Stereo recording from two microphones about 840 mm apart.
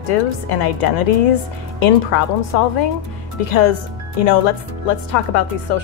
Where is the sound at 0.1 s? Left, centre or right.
Left.